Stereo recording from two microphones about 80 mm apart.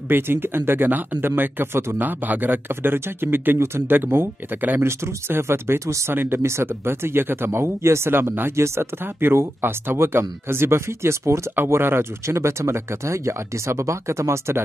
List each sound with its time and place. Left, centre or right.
0.1 s speech: right